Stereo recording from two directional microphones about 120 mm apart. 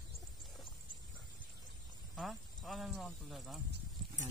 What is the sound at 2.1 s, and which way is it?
Speech, centre (ahead or behind).